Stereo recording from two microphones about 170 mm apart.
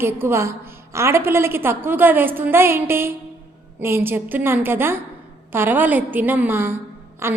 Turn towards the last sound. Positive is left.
turn(degrees=-15)  # may be behind; listen again after turning